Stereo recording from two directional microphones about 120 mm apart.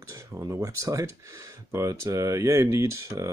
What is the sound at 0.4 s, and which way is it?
Speech, 25° right (ahead or behind).